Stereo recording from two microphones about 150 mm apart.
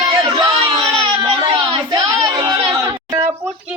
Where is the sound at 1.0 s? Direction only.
35° right (ahead or behind).